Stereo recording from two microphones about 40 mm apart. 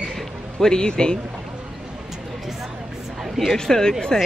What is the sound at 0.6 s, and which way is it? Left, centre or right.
Speech, centre.